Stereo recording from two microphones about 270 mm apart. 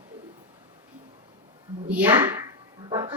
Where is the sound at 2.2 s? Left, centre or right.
Centre.